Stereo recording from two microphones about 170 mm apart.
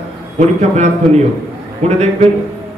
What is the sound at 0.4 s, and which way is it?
A man's voice, 40° right (ahead or behind).